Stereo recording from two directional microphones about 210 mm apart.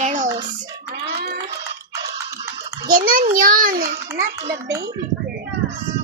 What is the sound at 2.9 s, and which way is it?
A child's voice, 40° right (ahead or behind).